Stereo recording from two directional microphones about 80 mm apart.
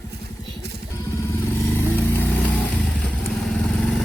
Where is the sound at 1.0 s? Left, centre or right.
Left.